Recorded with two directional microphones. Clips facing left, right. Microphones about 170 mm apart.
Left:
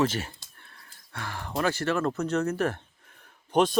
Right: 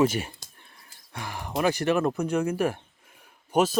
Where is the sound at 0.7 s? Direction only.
15° right (ahead or behind).